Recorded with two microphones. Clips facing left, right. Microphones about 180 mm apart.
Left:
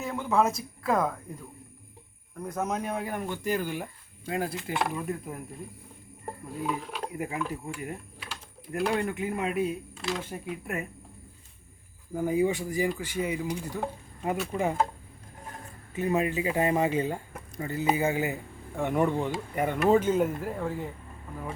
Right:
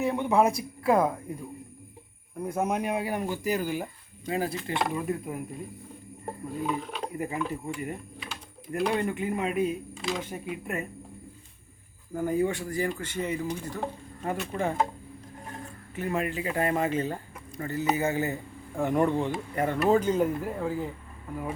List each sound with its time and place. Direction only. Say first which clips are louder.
0.0 s speech: right 3 dB; 15° right (ahead or behind); by 5.3 s centre (ahead or behind)
6.6 s speech: right 1 dB; centre (ahead or behind)
12.1 s speech: left 1 dB; 10° left (ahead or behind)
16.2 s speech: left 2 dB; 20° left (ahead or behind)
18.8 s speech: right 1 dB; centre (ahead or behind)